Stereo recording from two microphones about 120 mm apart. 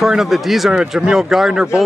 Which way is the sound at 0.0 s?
Centre (ahead or behind).